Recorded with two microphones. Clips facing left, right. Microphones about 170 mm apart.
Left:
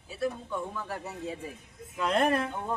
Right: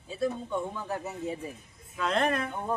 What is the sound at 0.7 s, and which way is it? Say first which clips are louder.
Speech: right 2 dB; 20° right (ahead or behind).